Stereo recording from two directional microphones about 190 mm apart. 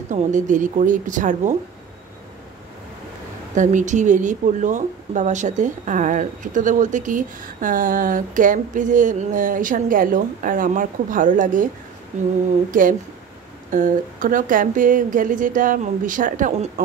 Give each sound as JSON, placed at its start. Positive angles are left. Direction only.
{"t": 0.1, "sound": "speech", "side_deg": -40}
{"t": 3.5, "sound": "speech", "side_deg": -40}